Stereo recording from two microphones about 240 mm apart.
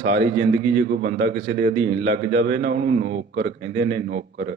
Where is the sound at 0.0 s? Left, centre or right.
Right.